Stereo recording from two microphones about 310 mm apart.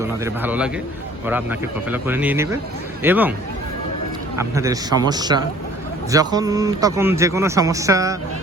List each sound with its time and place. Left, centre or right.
0.0 s a man's voice: centre
4.4 s a man's voice: centre